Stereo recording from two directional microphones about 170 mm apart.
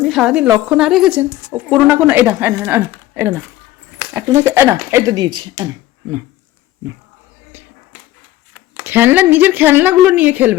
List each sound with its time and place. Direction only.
0.0 s a woman's voice: centre (ahead or behind); by 5.6 s 25° right (ahead or behind)
8.7 s speech: 10° right (ahead or behind)